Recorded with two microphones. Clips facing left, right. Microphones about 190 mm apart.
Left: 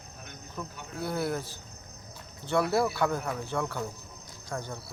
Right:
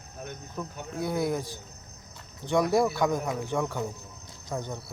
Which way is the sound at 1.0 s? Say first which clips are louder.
Right 3 dB; 15° right (ahead or behind).